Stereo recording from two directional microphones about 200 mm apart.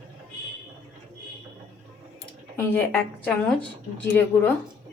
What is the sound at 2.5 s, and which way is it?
Speech, 10° left (ahead or behind).